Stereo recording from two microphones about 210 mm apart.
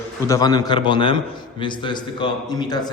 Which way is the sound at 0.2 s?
15° left (ahead or behind).